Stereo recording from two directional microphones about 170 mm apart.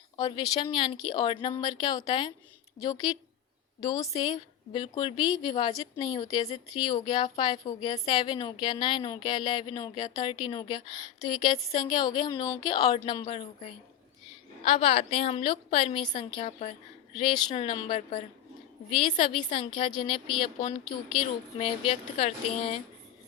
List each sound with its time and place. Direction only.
0.2 s speech: 25° left (ahead or behind)